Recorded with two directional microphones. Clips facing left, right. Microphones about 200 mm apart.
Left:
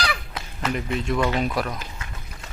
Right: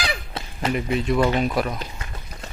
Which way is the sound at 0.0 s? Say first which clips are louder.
Even; 25° right (ahead or behind).